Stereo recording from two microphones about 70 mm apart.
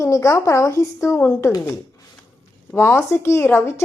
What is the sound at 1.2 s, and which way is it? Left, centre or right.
Speech, left.